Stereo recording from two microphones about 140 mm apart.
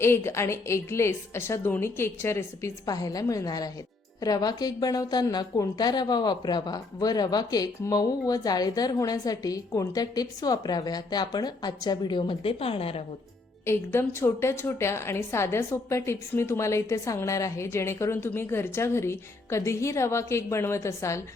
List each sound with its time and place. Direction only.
0.0 s a woman's voice: 20° left (ahead or behind); by 13.0 s 45° left (ahead or behind)
13.7 s a woman's voice: 20° left (ahead or behind)